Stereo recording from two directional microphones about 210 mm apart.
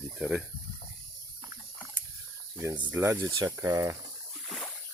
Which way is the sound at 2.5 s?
15° right (ahead or behind).